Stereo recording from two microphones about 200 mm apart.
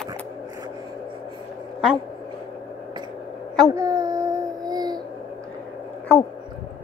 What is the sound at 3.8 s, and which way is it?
Baby cry, 15° right (ahead or behind).